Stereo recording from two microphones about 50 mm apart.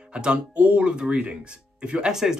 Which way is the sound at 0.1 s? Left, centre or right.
Right.